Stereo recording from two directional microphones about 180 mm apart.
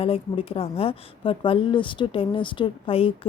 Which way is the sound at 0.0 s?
30° left (ahead or behind).